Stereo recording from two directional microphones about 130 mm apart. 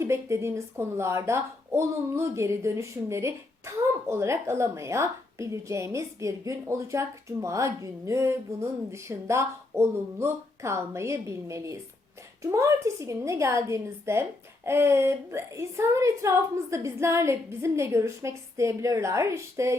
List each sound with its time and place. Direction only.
0.0 s speech: 20° right (ahead or behind)